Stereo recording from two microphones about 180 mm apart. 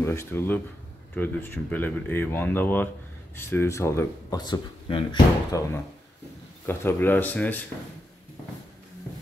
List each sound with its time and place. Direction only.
0.0 s speech: 15° left (ahead or behind)